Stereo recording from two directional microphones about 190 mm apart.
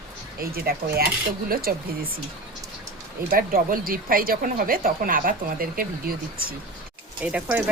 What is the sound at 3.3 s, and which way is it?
Speech, 50° right (ahead or behind).